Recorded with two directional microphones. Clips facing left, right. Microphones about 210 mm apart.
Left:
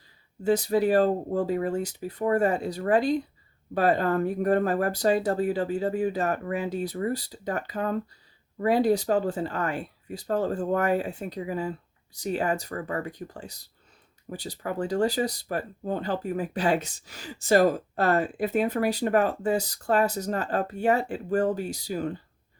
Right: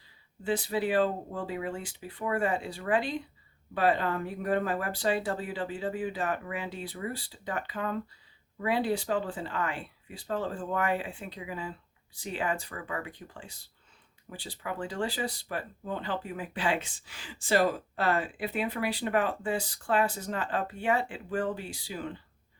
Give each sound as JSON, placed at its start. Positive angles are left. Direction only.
{"t": 0.4, "sound": "speech", "side_deg": 40}